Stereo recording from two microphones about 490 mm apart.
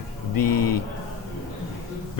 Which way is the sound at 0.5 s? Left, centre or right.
Left.